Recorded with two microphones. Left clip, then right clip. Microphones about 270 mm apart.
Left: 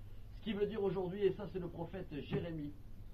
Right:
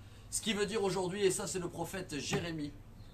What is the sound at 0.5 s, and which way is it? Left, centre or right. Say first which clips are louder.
A man's voice: right 3 dB; centre.